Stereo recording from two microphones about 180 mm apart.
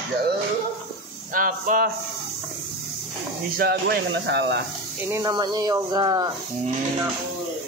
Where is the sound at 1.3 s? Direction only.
50° right (ahead or behind).